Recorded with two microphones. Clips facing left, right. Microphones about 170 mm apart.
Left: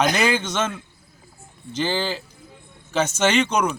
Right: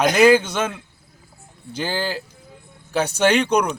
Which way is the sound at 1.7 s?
10° right (ahead or behind).